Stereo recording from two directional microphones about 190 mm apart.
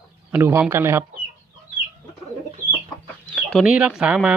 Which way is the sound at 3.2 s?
Centre (ahead or behind).